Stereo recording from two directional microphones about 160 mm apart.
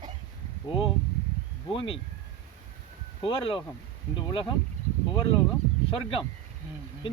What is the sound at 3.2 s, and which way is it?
Speech, 35° left (ahead or behind).